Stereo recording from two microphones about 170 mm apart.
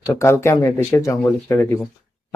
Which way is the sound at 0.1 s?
15° left (ahead or behind).